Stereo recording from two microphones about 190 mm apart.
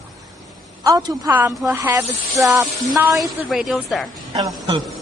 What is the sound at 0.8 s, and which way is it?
Speech, 15° right (ahead or behind).